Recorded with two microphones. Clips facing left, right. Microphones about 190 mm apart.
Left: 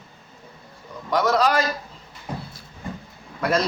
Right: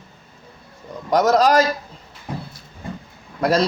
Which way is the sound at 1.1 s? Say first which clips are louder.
Right 5 dB; 40° right (ahead or behind).